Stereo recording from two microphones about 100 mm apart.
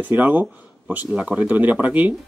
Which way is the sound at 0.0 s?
15° right (ahead or behind).